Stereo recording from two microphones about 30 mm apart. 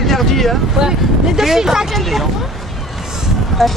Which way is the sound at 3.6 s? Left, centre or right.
Centre.